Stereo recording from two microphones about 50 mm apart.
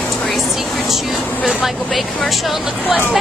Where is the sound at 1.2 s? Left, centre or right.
Left.